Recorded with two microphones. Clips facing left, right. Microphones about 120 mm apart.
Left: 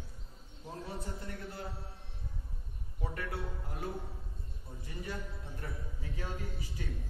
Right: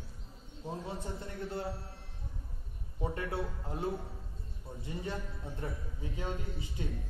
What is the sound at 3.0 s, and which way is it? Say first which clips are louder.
Speech: right 4 dB; 25° right (ahead or behind).